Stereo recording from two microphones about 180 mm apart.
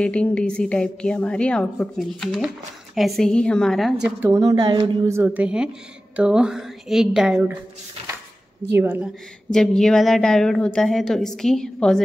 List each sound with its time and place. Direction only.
0.0 s a woman's voice: 5° left (ahead or behind)
4.2 s a woman's voice: 20° right (ahead or behind)
8.7 s a woman's voice: 10° right (ahead or behind)
9.5 s a woman's voice: 5° left (ahead or behind)